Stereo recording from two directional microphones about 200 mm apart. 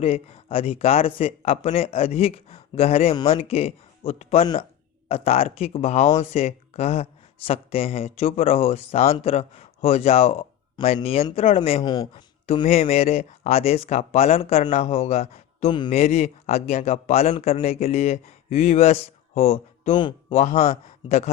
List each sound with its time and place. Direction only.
0.0 s speech: 30° left (ahead or behind)
11.8 s speech: 20° left (ahead or behind)
12.6 s speech: 35° left (ahead or behind)